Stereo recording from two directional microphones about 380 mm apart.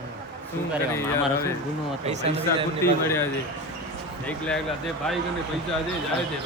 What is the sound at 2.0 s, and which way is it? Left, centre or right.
Speech, centre.